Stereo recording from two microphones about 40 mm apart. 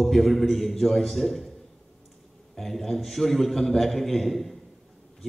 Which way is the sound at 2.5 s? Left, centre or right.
Centre.